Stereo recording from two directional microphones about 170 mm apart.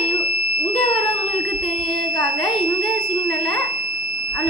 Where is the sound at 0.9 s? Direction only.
30° left (ahead or behind).